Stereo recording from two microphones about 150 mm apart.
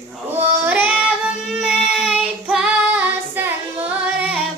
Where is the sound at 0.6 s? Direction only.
10° right (ahead or behind).